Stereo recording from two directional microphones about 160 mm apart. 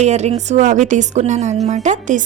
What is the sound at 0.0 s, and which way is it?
A woman's voice, 45° right (ahead or behind).